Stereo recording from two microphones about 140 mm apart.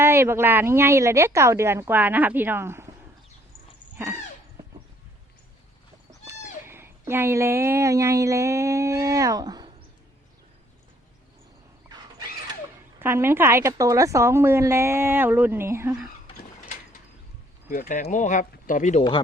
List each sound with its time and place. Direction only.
0.0 s a woman's voice: 15° right (ahead or behind)
3.9 s speech: 15° right (ahead or behind)
6.1 s speech: 20° right (ahead or behind)
13.0 s a woman's voice: 15° right (ahead or behind)
17.7 s speech: 70° left (ahead or behind)